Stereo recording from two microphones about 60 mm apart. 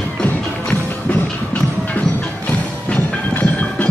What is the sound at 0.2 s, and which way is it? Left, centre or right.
Music, left.